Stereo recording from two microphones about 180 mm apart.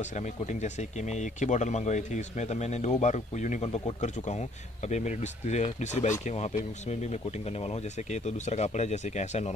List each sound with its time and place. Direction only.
0.0 s speech: 40° left (ahead or behind)